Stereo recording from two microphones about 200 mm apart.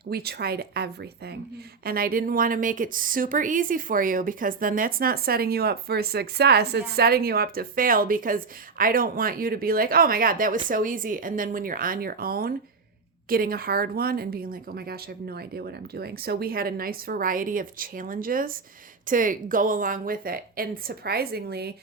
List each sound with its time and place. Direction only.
0.1 s a woman's voice: 50° right (ahead or behind)